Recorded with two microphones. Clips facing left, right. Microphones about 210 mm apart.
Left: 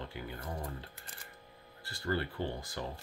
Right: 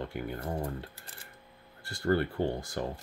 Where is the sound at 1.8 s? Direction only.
50° right (ahead or behind).